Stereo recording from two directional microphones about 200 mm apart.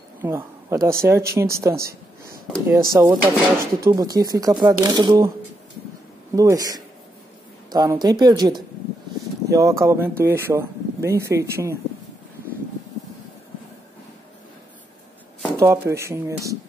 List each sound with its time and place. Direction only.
0.2 s speech: 10° right (ahead or behind)
3.0 s speech: 10° right (ahead or behind)
6.3 s a woman's voice: 15° right (ahead or behind)
15.5 s speech: 15° right (ahead or behind)